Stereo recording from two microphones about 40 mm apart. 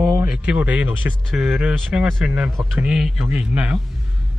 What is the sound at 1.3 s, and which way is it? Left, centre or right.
Speech, centre.